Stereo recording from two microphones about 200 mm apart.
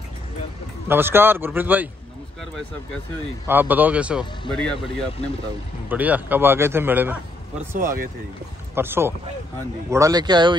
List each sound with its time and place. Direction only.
0.8 s a man's voice: 10° right (ahead or behind)
3.4 s a man's voice: 10° right (ahead or behind)
5.9 s a man's voice: 10° right (ahead or behind)
7.7 s speech: 45° right (ahead or behind)
8.7 s a man's voice: 10° right (ahead or behind)